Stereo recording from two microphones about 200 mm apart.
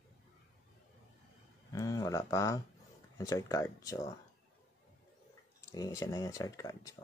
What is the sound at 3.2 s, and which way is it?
Speech, 15° left (ahead or behind).